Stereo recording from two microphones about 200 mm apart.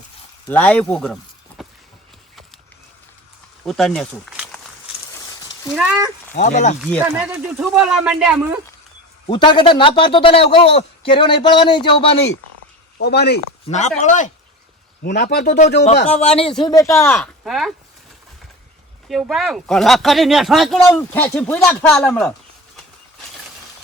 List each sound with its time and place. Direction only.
0.4 s speech: 5° left (ahead or behind)
3.7 s speech: centre (ahead or behind)
5.7 s speech: 5° right (ahead or behind)
6.3 s speech: 40° left (ahead or behind)
7.0 s speech: 5° right (ahead or behind)
9.2 s a man's voice: 25° left (ahead or behind)
13.0 s speech: 55° left (ahead or behind)
13.7 s speech: 35° left (ahead or behind)
15.0 s speech: 55° left (ahead or behind)
16.0 s speech: 30° left (ahead or behind)
16.6 s speech: 15° left (ahead or behind)
17.2 s speech: centre (ahead or behind)
19.0 s speech: centre (ahead or behind)